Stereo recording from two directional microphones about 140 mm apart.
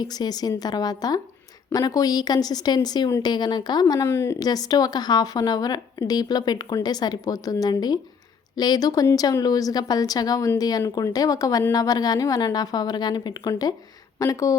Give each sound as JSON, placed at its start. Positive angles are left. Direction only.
{"t": 0.0, "sound": "speech", "side_deg": 30}